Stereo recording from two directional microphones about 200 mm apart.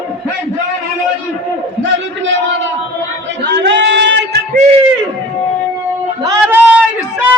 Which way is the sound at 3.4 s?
60° right (ahead or behind).